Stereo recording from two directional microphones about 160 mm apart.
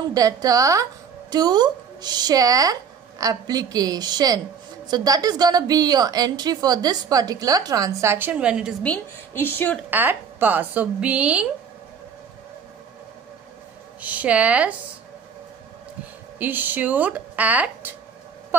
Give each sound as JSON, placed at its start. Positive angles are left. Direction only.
{"t": 0.1, "sound": "a woman's voice", "side_deg": -20}
{"t": 8.8, "sound": "a woman's voice", "side_deg": 10}
{"t": 9.8, "sound": "speech", "side_deg": -10}
{"t": 14.0, "sound": "speech", "side_deg": -10}
{"t": 16.3, "sound": "speech", "side_deg": -10}